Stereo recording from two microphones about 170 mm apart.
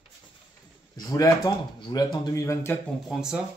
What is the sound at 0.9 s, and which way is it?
Speech, 20° left (ahead or behind).